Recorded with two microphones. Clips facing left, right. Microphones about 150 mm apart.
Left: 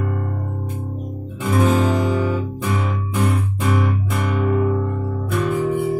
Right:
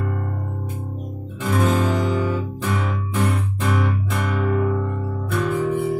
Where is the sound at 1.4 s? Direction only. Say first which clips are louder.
Left 3 dB; 15° left (ahead or behind).